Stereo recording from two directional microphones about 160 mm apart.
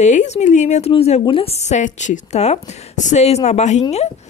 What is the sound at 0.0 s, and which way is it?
A woman's voice, 50° left (ahead or behind).